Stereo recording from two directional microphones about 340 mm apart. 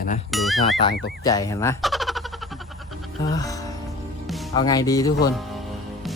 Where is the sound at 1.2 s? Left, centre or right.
Centre.